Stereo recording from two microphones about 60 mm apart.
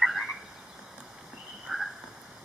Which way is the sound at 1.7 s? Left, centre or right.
Centre.